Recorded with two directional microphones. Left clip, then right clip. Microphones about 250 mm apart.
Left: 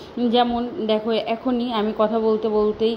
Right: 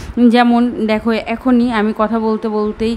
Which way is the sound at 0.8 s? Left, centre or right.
Right.